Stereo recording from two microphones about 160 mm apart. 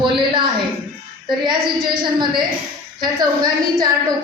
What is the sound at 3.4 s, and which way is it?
Speech, 25° right (ahead or behind).